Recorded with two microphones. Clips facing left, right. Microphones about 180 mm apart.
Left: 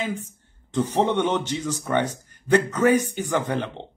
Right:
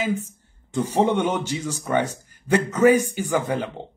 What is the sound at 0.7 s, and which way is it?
Speech, 10° right (ahead or behind).